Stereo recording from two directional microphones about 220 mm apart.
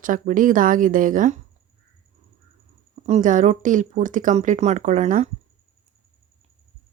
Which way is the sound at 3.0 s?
35° right (ahead or behind).